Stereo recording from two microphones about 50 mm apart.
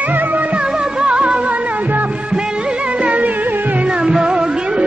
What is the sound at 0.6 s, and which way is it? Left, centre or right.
Music, centre.